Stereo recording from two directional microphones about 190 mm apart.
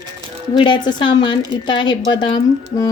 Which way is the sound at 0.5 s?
25° left (ahead or behind).